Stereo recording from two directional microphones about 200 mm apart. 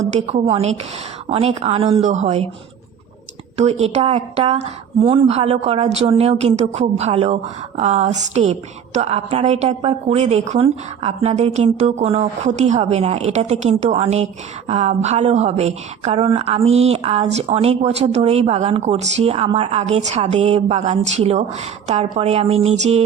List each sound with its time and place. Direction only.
0.0 s a woman's voice: 35° right (ahead or behind)
3.6 s a woman's voice: 30° right (ahead or behind)